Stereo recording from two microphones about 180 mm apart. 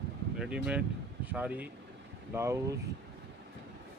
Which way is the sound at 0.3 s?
5° right (ahead or behind).